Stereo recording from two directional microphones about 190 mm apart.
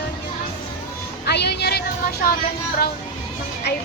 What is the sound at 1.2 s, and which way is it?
Music, 60° left (ahead or behind).